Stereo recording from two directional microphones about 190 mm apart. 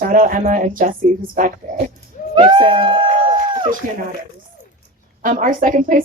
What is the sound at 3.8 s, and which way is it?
Speech, 45° right (ahead or behind).